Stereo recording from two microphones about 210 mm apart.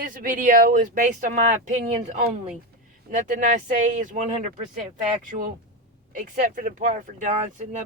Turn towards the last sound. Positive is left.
turn(degrees=-35)  # may be behind; listen again after turning